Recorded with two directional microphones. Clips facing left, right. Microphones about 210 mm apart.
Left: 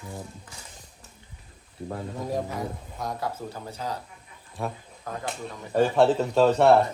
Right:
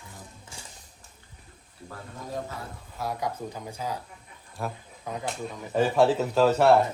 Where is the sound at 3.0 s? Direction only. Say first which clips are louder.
Right 1 dB; 10° right (ahead or behind).